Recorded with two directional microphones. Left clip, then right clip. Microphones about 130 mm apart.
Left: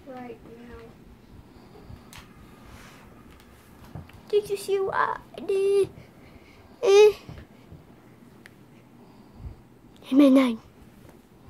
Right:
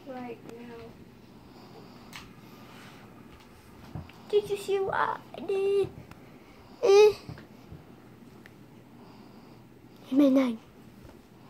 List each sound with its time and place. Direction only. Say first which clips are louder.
4.3 s speech: left 2 dB; 15° left (ahead or behind)
6.8 s babbling: left 3 dB; 15° left (ahead or behind)
10.0 s speech: left 5 dB; 25° left (ahead or behind)